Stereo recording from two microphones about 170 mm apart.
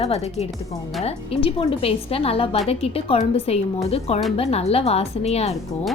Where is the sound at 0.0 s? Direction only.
40° left (ahead or behind).